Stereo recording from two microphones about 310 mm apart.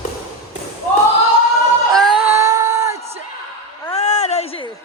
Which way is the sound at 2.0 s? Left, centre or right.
Centre.